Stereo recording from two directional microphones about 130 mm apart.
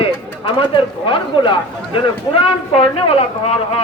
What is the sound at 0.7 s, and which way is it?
Speech, 40° left (ahead or behind).